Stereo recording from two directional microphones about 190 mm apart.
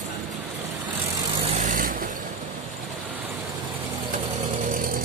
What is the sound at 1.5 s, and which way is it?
Vehicle, 45° right (ahead or behind).